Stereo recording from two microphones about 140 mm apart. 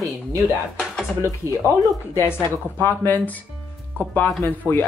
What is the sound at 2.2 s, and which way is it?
Speech, 15° left (ahead or behind).